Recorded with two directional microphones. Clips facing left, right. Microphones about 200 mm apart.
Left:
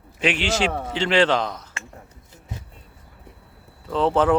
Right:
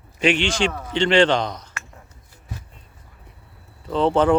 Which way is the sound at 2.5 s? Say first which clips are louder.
Even; 20° left (ahead or behind).